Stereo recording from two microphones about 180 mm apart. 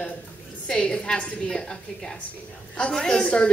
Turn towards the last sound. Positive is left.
turn(degrees=5)  # may be behind; listen again after turning